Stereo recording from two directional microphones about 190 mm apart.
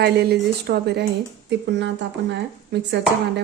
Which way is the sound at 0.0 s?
60° right (ahead or behind).